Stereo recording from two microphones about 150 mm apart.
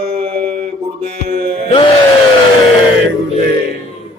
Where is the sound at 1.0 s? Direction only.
45° right (ahead or behind).